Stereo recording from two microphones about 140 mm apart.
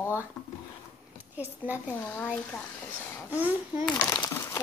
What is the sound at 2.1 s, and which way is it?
Speech, 15° left (ahead or behind).